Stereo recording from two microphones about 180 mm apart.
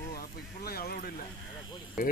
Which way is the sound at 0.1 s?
60° left (ahead or behind).